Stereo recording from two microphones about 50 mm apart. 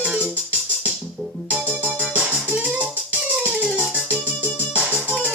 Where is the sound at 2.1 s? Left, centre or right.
Right.